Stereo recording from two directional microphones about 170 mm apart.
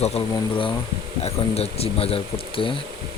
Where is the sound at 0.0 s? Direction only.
35° left (ahead or behind).